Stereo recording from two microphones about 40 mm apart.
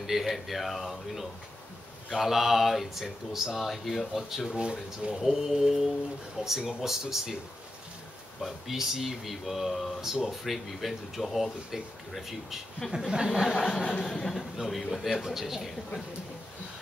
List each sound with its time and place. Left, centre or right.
0.0 s speech: centre
4.4 s speech: centre
5.1 s mantra: centre
8.4 s speech: centre
12.9 s mantra: centre
13.5 s speech: centre
15.0 s mantra: centre